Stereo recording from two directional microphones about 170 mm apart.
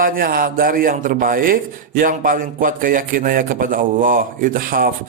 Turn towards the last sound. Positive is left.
turn(degrees=-55)  # may be behind; listen again after turning